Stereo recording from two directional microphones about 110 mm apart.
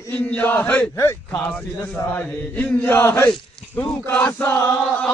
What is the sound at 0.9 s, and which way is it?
Speech, 25° left (ahead or behind).